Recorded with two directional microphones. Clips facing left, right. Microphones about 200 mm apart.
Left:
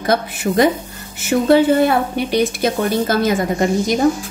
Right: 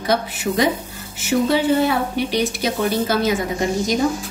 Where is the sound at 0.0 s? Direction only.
50° left (ahead or behind).